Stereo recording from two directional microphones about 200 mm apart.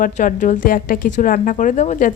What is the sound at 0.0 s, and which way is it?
A woman's voice, 40° left (ahead or behind).